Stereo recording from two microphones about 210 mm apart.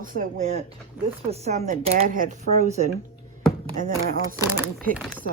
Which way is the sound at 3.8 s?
40° right (ahead or behind).